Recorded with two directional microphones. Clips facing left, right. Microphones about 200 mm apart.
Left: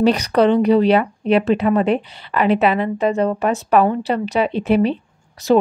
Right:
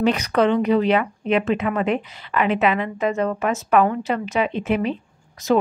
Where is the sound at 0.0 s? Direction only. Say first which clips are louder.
Left 4 dB; 35° left (ahead or behind).